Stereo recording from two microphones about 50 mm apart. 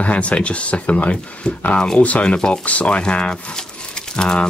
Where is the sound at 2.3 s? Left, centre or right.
Centre.